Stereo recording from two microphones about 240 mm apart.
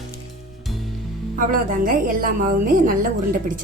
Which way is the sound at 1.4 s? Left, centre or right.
Right.